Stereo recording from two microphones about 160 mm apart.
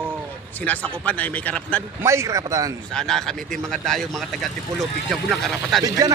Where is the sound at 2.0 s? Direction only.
15° right (ahead or behind).